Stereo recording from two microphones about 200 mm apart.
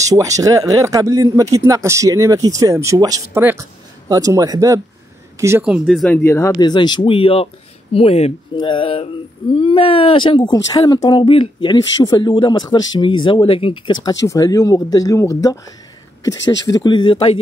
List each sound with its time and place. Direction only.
0.0 s speech: 15° right (ahead or behind); by 13.9 s 25° left (ahead or behind)
14.2 s speech: 15° left (ahead or behind)
16.6 s speech: 20° left (ahead or behind)